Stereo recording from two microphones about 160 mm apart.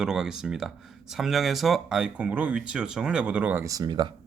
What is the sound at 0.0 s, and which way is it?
Speech, 5° right (ahead or behind).